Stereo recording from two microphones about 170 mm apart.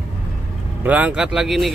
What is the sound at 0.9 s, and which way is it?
Speech, 5° right (ahead or behind).